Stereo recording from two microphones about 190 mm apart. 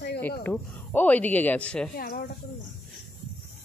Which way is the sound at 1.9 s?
50° left (ahead or behind).